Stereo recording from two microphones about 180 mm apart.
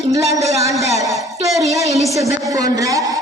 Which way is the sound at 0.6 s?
15° right (ahead or behind).